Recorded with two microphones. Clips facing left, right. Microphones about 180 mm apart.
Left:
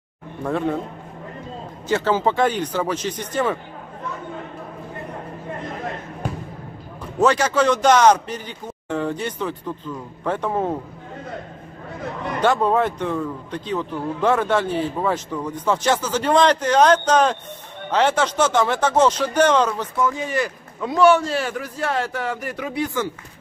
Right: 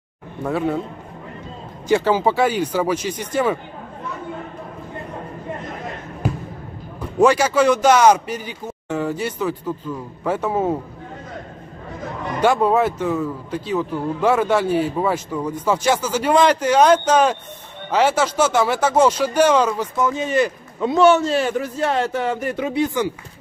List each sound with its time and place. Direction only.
0.4 s speech: 5° right (ahead or behind)
1.9 s a man's voice: 10° right (ahead or behind)
7.2 s a man's voice: 10° right (ahead or behind)
12.4 s a man's voice: 10° right (ahead or behind)
20.0 s a man's voice: 20° right (ahead or behind)